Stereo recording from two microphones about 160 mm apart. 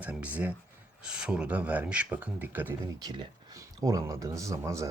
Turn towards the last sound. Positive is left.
turn(degrees=-20)  # may be behind; listen again after turning